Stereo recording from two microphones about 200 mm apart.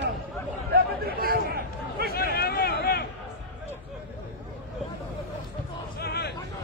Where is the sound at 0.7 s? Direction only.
50° right (ahead or behind).